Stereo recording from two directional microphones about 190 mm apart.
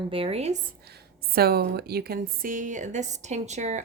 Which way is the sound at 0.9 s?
55° right (ahead or behind).